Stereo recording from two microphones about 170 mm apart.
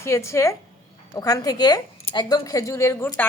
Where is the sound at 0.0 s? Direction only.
15° left (ahead or behind).